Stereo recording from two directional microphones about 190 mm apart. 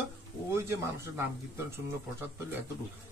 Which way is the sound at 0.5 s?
15° right (ahead or behind).